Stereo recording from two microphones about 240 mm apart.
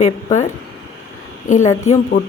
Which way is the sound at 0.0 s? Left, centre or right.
Left.